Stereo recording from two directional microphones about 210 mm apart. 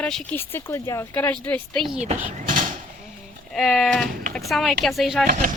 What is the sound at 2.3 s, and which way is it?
Door, 40° right (ahead or behind).